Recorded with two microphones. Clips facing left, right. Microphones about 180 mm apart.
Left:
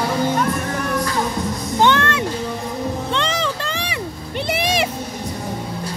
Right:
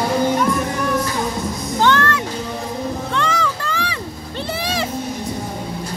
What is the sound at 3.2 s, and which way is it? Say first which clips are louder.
Vehicle: right 1 dB; 25° left (ahead or behind).